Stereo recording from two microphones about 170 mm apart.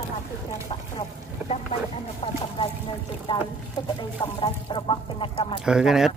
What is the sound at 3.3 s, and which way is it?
Speech, 25° left (ahead or behind).